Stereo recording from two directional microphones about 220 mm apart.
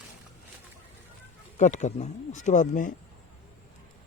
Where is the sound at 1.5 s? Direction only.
35° left (ahead or behind).